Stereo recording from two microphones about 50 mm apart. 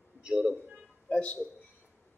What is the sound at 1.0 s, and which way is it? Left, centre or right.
Speech, left.